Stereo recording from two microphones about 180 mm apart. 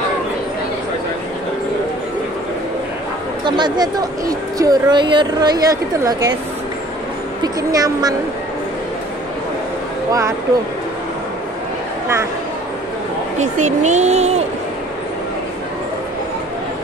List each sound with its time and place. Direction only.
3.4 s speech: 25° right (ahead or behind)
7.4 s speech: 20° right (ahead or behind)
13.4 s speech: 40° right (ahead or behind)